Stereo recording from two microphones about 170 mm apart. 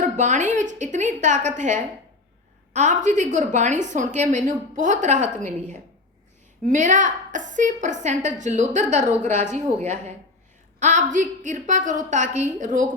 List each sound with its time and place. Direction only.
0.0 s a woman's voice: 45° right (ahead or behind)